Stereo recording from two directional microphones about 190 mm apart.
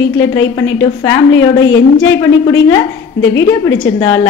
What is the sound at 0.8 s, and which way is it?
Speech, 15° left (ahead or behind).